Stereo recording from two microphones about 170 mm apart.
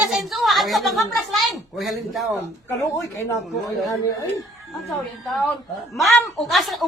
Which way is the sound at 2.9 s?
20° left (ahead or behind).